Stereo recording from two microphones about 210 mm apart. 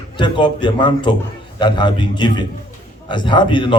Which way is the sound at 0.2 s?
20° left (ahead or behind).